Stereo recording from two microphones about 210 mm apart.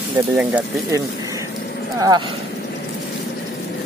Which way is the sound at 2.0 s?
20° right (ahead or behind).